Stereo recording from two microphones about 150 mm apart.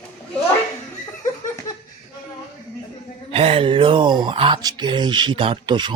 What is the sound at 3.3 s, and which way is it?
Speech, 40° right (ahead or behind).